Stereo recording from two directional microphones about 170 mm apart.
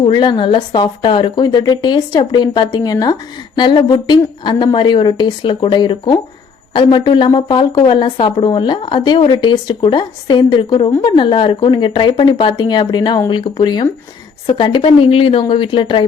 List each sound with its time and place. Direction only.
0.0 s a woman's voice: 30° left (ahead or behind)